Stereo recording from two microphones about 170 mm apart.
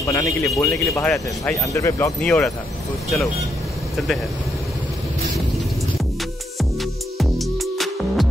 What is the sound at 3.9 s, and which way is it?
Speech, centre (ahead or behind).